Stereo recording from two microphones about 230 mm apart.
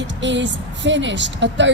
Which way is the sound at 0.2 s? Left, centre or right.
Right.